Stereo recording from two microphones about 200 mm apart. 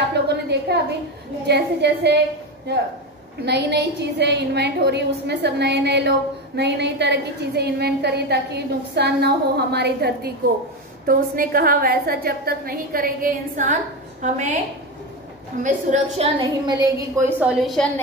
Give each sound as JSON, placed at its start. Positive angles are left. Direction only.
{"t": 0.3, "sound": "a sound", "side_deg": -55}
{"t": 1.5, "sound": "a woman's voice", "side_deg": -55}
{"t": 15.6, "sound": "a woman's voice", "side_deg": -40}
{"t": 16.3, "sound": "a woman's voice", "side_deg": -20}